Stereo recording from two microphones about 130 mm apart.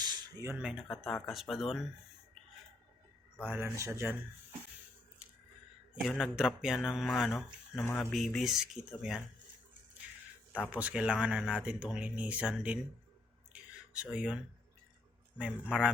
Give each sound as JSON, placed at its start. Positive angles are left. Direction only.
{"t": 0.0, "sound": "a sound", "side_deg": -35}
{"t": 0.5, "sound": "speech", "side_deg": -5}
{"t": 3.4, "sound": "speech", "side_deg": -15}
{"t": 6.0, "sound": "speech", "side_deg": 0}
{"t": 7.8, "sound": "speech", "side_deg": 15}
{"t": 8.1, "sound": "speech", "side_deg": 0}
{"t": 10.7, "sound": "speech", "side_deg": -10}
{"t": 13.5, "sound": "a sound", "side_deg": -10}
{"t": 15.4, "sound": "speech", "side_deg": -5}